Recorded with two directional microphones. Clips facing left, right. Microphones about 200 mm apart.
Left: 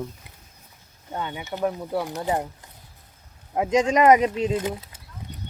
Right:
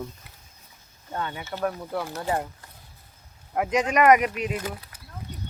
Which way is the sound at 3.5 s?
25° left (ahead or behind).